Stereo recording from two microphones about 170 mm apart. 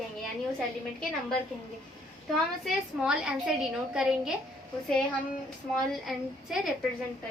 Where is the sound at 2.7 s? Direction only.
5° right (ahead or behind).